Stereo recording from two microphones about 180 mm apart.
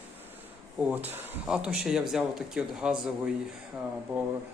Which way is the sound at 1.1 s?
10° right (ahead or behind).